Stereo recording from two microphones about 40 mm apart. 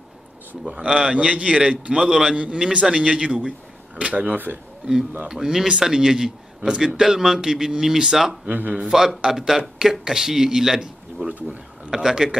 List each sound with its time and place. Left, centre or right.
0.7 s a man's voice: right
5.3 s speech: centre
8.5 s a man's voice: right
8.7 s speech: centre
11.2 s speech: right
11.9 s speech: centre